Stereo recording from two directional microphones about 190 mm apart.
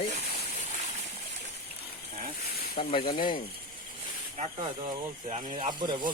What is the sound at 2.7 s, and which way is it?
Speech, 25° left (ahead or behind).